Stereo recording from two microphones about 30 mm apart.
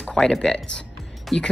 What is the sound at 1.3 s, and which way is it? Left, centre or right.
Speech, centre.